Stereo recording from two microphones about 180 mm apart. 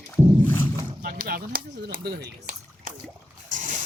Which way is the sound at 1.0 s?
55° right (ahead or behind).